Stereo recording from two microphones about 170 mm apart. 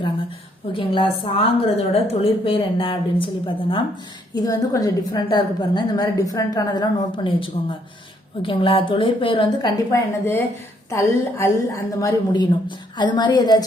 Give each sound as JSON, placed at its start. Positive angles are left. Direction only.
{"t": 0.7, "sound": "a woman's voice", "side_deg": 30}